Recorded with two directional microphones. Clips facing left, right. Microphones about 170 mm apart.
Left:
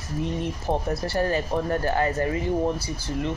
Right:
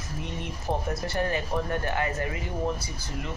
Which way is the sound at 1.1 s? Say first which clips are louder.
Left 4 dB; 35° left (ahead or behind).